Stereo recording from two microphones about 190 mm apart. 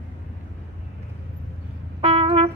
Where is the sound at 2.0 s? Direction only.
30° right (ahead or behind).